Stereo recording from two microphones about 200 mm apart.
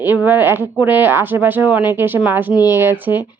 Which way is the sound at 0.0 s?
10° right (ahead or behind).